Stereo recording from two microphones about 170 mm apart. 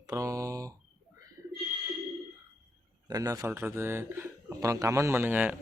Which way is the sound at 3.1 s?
20° right (ahead or behind).